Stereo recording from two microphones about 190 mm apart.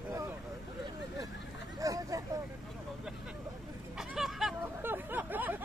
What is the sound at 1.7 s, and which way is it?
Vehicle, 15° right (ahead or behind).